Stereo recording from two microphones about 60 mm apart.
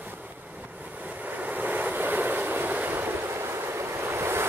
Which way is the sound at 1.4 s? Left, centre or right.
Right.